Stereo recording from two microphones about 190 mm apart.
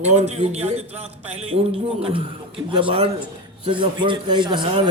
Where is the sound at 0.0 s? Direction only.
35° right (ahead or behind).